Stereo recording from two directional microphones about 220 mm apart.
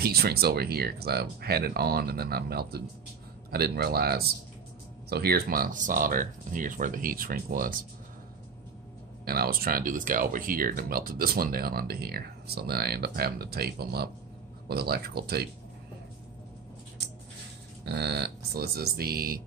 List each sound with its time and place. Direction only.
0.0 s speech: 45° right (ahead or behind)
9.2 s speech: 45° right (ahead or behind)
17.8 s speech: 50° right (ahead or behind)